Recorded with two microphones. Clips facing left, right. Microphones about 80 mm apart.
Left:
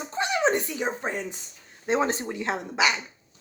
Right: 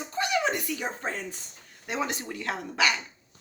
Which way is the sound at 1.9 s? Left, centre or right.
Left.